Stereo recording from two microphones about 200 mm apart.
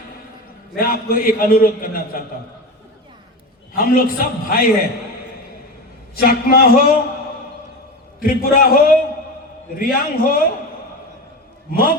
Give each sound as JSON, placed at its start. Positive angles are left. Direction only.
{"t": 0.8, "sound": "a man's voice", "side_deg": 45}
{"t": 3.8, "sound": "a man's voice", "side_deg": 45}
{"t": 6.1, "sound": "a man's voice", "side_deg": 50}
{"t": 8.2, "sound": "a man's voice", "side_deg": 45}
{"t": 11.7, "sound": "a man's voice", "side_deg": 45}